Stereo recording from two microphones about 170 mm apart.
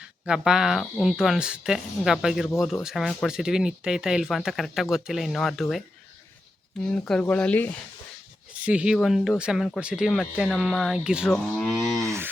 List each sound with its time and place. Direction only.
0.3 s speech: 5° right (ahead or behind)
6.8 s speech: 5° left (ahead or behind)
8.6 s speech: 5° right (ahead or behind)
12.0 s a sound: 15° right (ahead or behind)